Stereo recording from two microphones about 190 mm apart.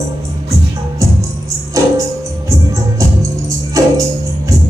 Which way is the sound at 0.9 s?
15° right (ahead or behind).